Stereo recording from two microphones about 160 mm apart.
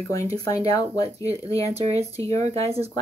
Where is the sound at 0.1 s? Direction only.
20° left (ahead or behind).